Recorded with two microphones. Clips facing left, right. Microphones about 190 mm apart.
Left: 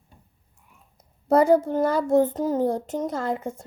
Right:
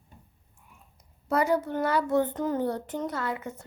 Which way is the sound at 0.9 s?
50° left (ahead or behind).